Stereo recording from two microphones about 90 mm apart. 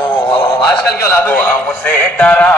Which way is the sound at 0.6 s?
20° left (ahead or behind).